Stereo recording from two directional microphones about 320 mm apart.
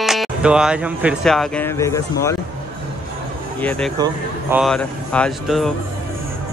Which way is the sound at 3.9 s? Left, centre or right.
Centre.